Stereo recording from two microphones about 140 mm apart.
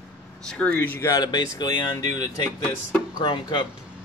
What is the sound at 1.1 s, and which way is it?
Speech, 30° left (ahead or behind).